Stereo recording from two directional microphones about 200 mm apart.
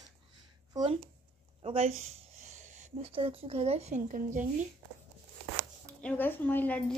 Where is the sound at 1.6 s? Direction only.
30° right (ahead or behind).